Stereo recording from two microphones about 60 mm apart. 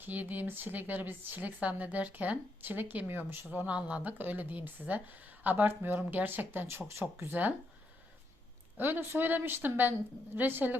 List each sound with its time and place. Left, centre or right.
0.0 s speech: right
3.7 s speech: right
7.3 s speech: right
8.8 s speech: right